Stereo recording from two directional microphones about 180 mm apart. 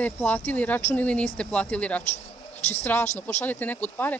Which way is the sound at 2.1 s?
40° left (ahead or behind).